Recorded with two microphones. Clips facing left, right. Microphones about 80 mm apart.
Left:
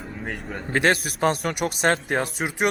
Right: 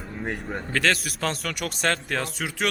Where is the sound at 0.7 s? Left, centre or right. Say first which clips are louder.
Left 4 dB; left.